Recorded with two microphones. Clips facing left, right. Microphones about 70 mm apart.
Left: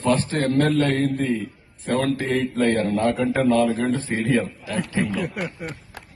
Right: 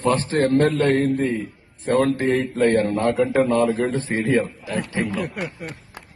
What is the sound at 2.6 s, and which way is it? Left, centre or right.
Speech, right.